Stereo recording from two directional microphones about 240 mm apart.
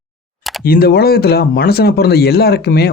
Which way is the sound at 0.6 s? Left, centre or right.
Left.